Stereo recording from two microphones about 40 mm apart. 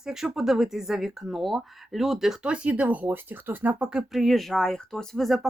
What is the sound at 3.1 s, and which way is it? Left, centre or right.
Speech, right.